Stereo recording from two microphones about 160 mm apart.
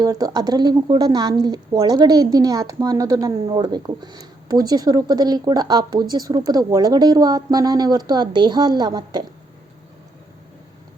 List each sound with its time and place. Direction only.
0.0 s speech: 20° right (ahead or behind)